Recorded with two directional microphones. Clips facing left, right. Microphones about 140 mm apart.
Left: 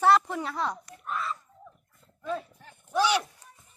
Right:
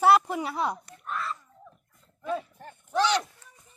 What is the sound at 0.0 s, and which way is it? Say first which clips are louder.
Speech: right 1 dB; 10° right (ahead or behind).